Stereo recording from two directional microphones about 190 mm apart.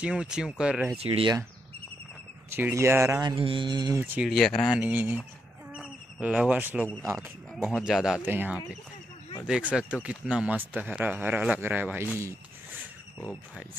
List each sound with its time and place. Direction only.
0.0 s speech: 5° right (ahead or behind)
0.9 s speech: 30° right (ahead or behind)
2.5 s speech: 15° right (ahead or behind)
4.0 s speech: 5° right (ahead or behind)
5.7 s bird: 5° right (ahead or behind)
7.2 s speech: centre (ahead or behind)